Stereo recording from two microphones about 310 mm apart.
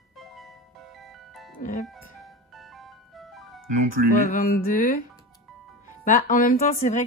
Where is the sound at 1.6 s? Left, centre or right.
Left.